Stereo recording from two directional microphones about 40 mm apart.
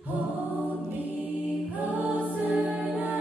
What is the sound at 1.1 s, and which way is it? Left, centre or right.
Choir, right.